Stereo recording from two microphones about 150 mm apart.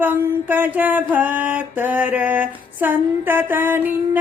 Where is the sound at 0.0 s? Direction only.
15° right (ahead or behind).